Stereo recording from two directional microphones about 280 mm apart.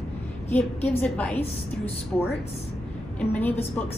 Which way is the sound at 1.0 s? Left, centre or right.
Centre.